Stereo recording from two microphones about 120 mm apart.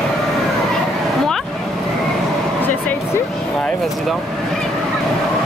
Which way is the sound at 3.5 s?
5° left (ahead or behind).